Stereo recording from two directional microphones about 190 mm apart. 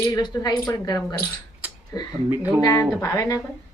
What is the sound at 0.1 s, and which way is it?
Speech, 20° left (ahead or behind).